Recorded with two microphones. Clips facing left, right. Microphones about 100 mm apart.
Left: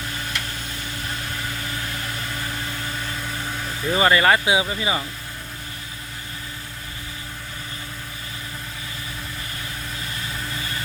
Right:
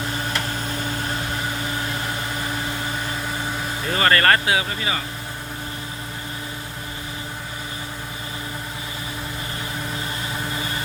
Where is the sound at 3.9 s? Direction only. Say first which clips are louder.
Left 1 dB; 10° left (ahead or behind).